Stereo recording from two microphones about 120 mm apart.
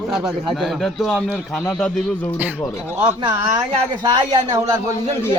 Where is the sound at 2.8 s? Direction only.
15° right (ahead or behind).